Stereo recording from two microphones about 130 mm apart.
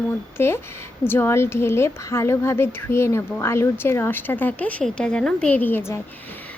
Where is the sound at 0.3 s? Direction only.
20° left (ahead or behind).